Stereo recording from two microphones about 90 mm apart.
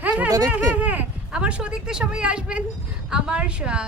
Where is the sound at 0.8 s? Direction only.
15° right (ahead or behind).